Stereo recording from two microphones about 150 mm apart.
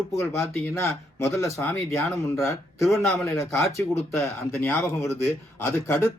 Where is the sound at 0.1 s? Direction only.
20° left (ahead or behind).